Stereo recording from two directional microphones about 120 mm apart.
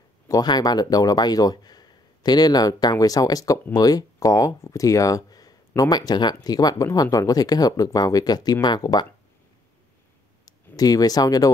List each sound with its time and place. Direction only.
0.3 s speech: 35° left (ahead or behind)
10.4 s speech: 30° left (ahead or behind)